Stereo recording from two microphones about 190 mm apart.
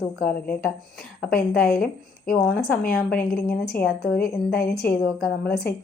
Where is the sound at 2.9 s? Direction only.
55° left (ahead or behind).